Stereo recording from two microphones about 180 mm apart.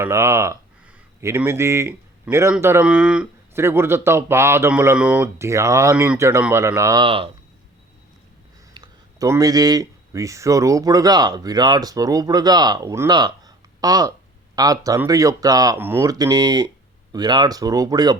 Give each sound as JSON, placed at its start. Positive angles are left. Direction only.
{"t": 0.0, "sound": "speech", "side_deg": -15}
{"t": 7.0, "sound": "speech", "side_deg": -30}
{"t": 8.7, "sound": "speech", "side_deg": -20}